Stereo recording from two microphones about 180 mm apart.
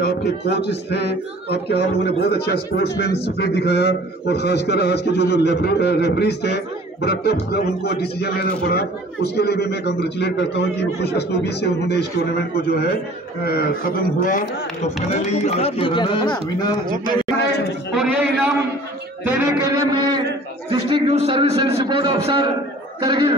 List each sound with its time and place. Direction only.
0.0 s a man's voice: 65° left (ahead or behind); by 14.9 s 50° left (ahead or behind)
15.3 s speech: 35° left (ahead or behind)
17.4 s a man's voice: 65° left (ahead or behind)
17.9 s a man's voice: 5° right (ahead or behind)
19.2 s music: 10° right (ahead or behind)
19.6 s a man's voice: 20° right (ahead or behind)